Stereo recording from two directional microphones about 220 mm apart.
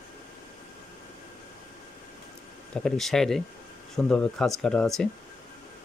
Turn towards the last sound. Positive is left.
turn(degrees=5)  # may be behind; listen again after turning